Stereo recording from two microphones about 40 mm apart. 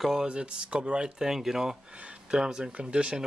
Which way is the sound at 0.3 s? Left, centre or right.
Right.